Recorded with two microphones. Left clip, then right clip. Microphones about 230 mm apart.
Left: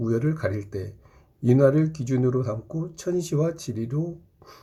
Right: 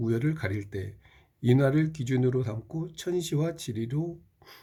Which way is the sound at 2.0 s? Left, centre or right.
Right.